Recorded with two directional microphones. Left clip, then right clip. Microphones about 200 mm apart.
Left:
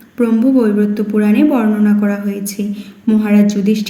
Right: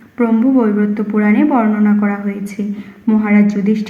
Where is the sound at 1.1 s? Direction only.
15° left (ahead or behind).